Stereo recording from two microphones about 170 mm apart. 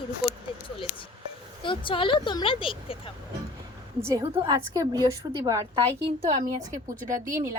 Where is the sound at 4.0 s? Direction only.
15° right (ahead or behind).